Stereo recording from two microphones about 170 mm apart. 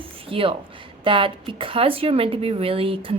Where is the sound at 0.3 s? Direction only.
30° right (ahead or behind).